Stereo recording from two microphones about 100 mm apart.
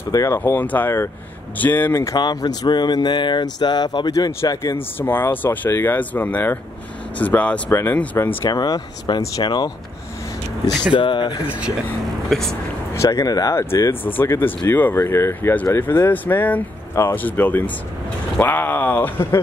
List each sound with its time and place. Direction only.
0.1 s speech: 35° left (ahead or behind)
0.4 s speech: 15° left (ahead or behind)
2.1 s speech: 45° left (ahead or behind)
4.7 s speech: 20° left (ahead or behind)
8.5 s speech: 40° left (ahead or behind)
10.9 s speech: 50° left (ahead or behind)
12.3 s speech: 5° left (ahead or behind)
12.9 s speech: 30° left (ahead or behind)